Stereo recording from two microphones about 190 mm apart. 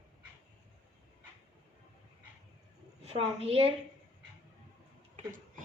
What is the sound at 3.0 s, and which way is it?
Speech, 30° right (ahead or behind).